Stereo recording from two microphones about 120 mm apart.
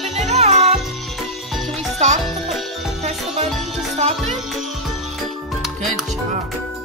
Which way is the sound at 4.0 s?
65° right (ahead or behind).